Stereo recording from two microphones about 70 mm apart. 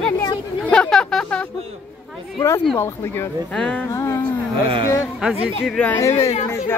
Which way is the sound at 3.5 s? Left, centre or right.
Centre.